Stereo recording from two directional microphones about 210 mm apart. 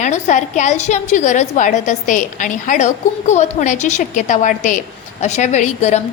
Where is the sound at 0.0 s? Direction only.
35° left (ahead or behind).